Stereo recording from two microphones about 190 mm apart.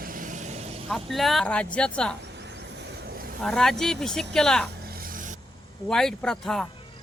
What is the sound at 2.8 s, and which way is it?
Vehicle, 50° right (ahead or behind).